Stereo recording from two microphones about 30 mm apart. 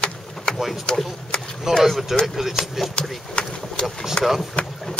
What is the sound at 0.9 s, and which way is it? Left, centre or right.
Speech, left.